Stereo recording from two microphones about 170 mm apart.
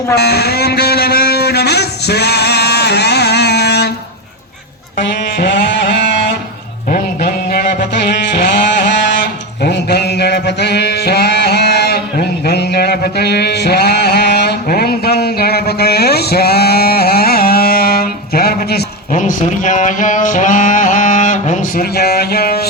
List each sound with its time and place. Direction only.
0.2 s a sound: 70° left (ahead or behind)
4.9 s music: 90° left
6.9 s a sound: 60° left (ahead or behind); by 8.9 s 80° left
9.6 s mantra: 75° left (ahead or behind)
19.1 s mantra: 50° left (ahead or behind)
21.9 s music: 70° left (ahead or behind)